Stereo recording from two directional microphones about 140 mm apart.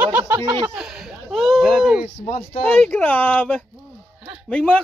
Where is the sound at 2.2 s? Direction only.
45° left (ahead or behind).